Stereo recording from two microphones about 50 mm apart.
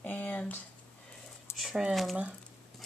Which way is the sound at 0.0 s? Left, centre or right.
Left.